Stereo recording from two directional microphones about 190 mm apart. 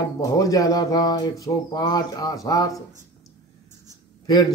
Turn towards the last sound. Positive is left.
turn(degrees=20)  # may be behind; listen again after turning